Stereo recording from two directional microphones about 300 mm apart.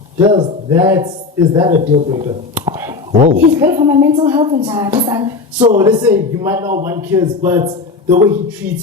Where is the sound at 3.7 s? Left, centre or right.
Centre.